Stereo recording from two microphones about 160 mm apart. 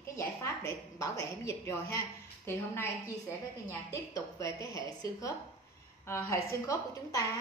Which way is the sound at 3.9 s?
20° left (ahead or behind).